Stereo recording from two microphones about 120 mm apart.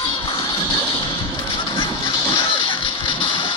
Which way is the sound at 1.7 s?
40° left (ahead or behind).